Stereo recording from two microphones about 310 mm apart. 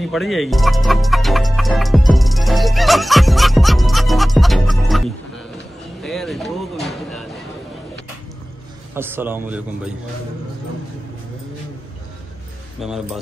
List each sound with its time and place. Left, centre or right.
0.0 s speech: centre
6.0 s a sound: centre
8.9 s a man's voice: centre
12.8 s speech: centre